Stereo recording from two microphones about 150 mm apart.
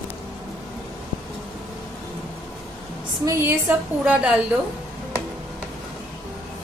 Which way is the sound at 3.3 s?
15° right (ahead or behind).